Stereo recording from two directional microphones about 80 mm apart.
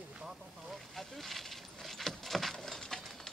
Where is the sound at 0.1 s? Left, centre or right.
Centre.